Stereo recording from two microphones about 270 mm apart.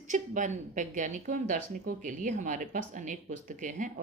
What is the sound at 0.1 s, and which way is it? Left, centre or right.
A woman's voice, right.